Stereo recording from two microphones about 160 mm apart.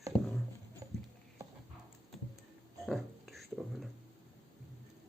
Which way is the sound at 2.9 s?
Centre (ahead or behind).